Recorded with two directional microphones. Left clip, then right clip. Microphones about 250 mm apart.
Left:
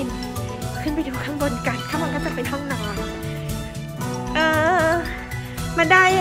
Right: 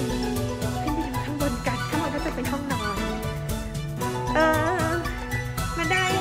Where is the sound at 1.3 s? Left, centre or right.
Centre.